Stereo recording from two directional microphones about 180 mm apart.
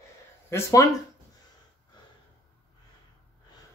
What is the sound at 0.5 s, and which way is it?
Speech, 15° left (ahead or behind).